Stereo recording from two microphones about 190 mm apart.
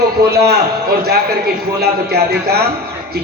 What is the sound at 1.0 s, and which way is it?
A man's voice, 55° right (ahead or behind).